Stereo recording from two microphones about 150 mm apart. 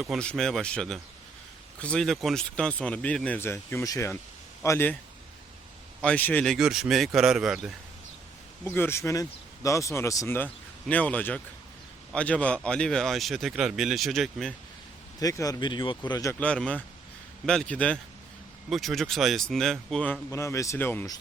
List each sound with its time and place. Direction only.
0.0 s speech: centre (ahead or behind)
6.0 s speech: 10° left (ahead or behind)
8.6 s speech: 15° left (ahead or behind)
15.2 s speech: 20° left (ahead or behind)
16.4 s speech: 5° left (ahead or behind)
20.3 s speech: 20° left (ahead or behind)